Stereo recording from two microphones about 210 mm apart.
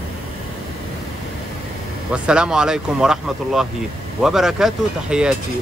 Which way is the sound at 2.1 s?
5° right (ahead or behind).